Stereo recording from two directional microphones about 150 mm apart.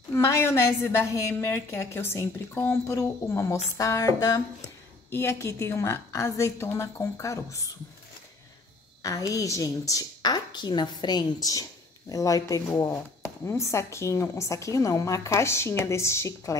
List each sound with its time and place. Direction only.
0.1 s a woman's voice: 20° left (ahead or behind)
9.0 s a woman's voice: 20° left (ahead or behind)